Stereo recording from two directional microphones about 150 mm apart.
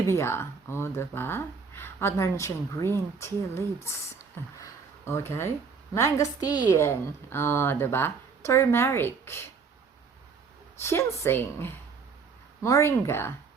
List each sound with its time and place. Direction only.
0.1 s a woman's voice: 15° left (ahead or behind)
4.6 s a sound: 15° left (ahead or behind)
5.9 s a woman's voice: 20° left (ahead or behind)
10.8 s a woman's voice: 15° left (ahead or behind)